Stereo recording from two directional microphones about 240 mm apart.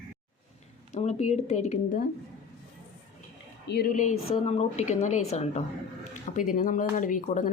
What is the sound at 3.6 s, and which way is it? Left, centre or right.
Speech, left.